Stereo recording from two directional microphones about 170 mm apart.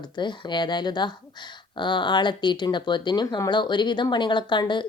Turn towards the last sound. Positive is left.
turn(degrees=25)  # may be behind; listen again after turning